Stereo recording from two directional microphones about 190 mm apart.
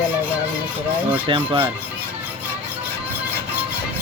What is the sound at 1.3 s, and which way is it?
Speech, 25° right (ahead or behind).